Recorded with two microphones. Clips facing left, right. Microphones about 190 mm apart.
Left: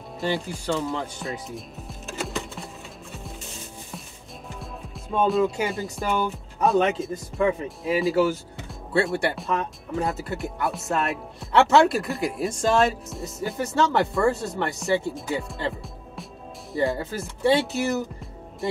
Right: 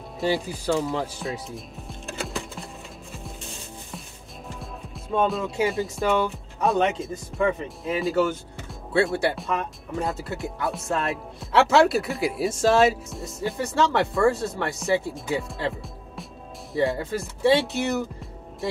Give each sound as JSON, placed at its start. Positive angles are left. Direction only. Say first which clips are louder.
{"t": 0.2, "sound": "music", "louder": "right 2 dB", "side_deg": -5}
{"t": 4.6, "sound": "speech", "louder": "even", "side_deg": 0}